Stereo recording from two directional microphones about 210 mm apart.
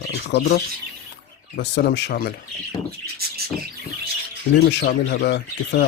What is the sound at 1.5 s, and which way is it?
Speech, 50° left (ahead or behind).